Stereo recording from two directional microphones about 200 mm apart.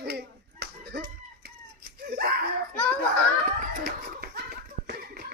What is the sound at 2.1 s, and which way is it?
Slap, 50° right (ahead or behind).